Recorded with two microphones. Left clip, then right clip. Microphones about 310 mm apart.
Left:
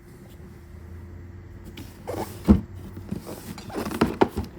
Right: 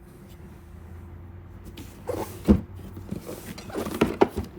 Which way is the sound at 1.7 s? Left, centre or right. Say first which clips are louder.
Right 1 dB; centre.